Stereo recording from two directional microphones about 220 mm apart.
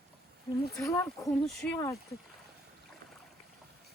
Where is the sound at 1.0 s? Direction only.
Centre (ahead or behind).